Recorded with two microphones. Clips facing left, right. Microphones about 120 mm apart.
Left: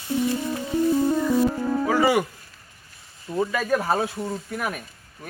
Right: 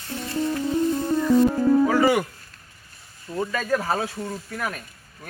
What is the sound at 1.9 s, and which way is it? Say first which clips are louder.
Music: even; 5° left (ahead or behind).